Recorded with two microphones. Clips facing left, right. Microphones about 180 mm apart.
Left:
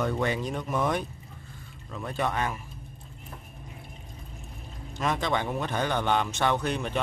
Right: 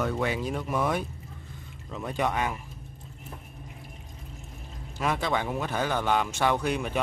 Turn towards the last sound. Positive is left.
turn(degrees=-10)  # may be behind; listen again after turning